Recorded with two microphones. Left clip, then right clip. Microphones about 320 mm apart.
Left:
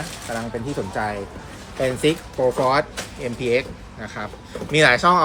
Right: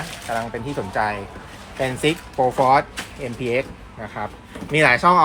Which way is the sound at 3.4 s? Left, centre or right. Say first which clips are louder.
Left 2 dB; right.